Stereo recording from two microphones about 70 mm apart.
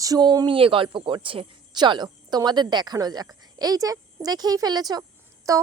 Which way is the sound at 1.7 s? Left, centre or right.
Right.